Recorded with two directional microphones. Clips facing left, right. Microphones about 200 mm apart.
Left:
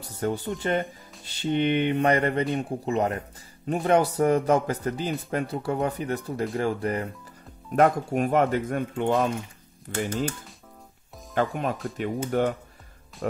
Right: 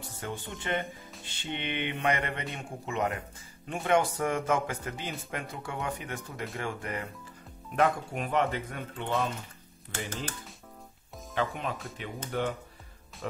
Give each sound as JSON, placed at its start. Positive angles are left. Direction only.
{"t": 0.0, "sound": "speech", "side_deg": 40}
{"t": 11.3, "sound": "speech", "side_deg": 50}